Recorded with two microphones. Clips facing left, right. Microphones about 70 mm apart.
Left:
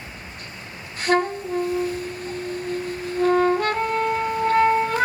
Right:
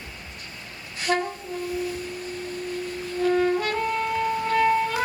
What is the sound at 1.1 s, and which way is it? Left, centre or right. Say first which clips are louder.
Saxophone: left 5 dB; left.